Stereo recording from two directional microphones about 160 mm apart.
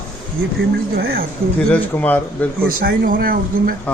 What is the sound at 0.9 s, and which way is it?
Speech, 70° right (ahead or behind).